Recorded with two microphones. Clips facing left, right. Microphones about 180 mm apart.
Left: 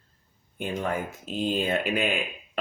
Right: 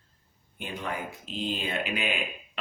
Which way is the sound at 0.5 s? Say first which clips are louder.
Left 6 dB; 45° left (ahead or behind).